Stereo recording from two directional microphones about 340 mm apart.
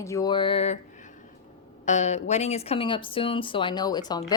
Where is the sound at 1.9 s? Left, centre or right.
Centre.